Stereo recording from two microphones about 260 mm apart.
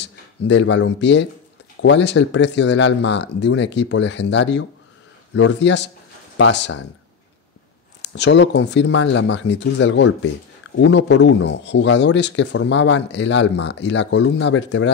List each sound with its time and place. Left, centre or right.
0.0 s speech: left
8.2 s speech: left